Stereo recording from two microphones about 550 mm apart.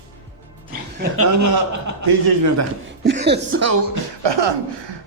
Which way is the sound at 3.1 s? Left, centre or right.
Centre.